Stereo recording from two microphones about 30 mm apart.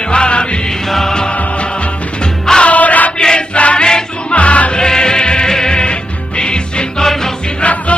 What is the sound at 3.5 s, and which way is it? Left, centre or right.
Choir, left.